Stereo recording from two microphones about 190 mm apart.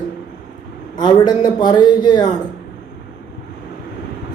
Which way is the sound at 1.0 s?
20° left (ahead or behind).